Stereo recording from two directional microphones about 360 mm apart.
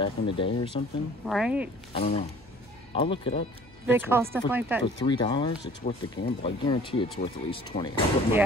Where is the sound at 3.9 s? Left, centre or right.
Centre.